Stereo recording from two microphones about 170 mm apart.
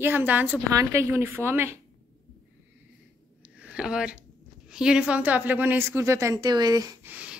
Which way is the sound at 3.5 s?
5° right (ahead or behind).